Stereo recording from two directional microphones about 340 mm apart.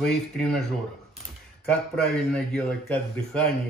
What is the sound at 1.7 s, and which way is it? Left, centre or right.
A man's voice, centre.